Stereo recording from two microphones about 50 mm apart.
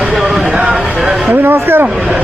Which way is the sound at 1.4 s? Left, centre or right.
Right.